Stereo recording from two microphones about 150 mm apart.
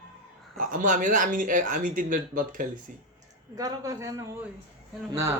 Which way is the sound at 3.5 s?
25° right (ahead or behind).